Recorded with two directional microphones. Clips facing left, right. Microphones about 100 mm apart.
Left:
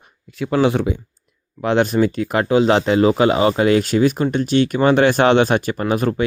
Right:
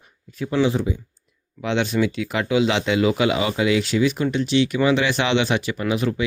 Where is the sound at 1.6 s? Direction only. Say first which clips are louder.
Left 5 dB; 45° left (ahead or behind).